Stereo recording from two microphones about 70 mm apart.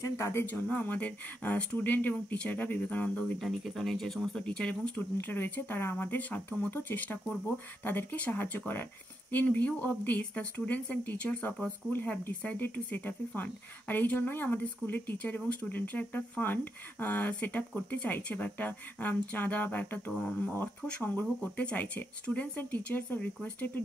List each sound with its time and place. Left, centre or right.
0.0 s speech: left
0.5 s speech: left
3.3 s speech: centre; by 23.8 s left